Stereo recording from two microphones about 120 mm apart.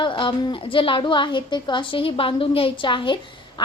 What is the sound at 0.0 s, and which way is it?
A woman's voice, 45° left (ahead or behind).